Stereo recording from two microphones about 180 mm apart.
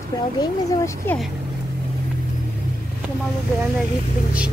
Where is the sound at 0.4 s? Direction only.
20° left (ahead or behind).